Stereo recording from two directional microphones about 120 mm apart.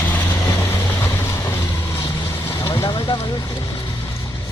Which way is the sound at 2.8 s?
45° left (ahead or behind).